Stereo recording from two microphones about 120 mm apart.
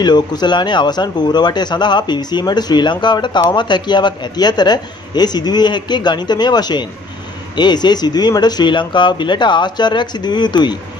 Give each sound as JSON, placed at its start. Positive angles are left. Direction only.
{"t": 0.0, "sound": "a man's voice", "side_deg": 35}